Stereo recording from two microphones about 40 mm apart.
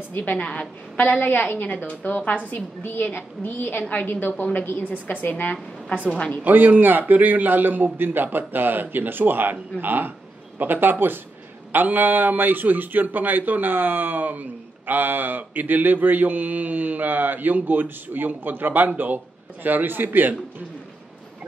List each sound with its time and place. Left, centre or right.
0.1 s a woman's voice: left
0.4 s a woman's voice: left
0.9 s a woman's voice: left
2.8 s a woman's voice: left
6.1 s speech: left
6.4 s a man's voice: right